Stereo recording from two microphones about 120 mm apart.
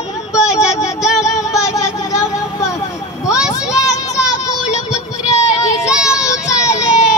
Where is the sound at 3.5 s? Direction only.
30° left (ahead or behind).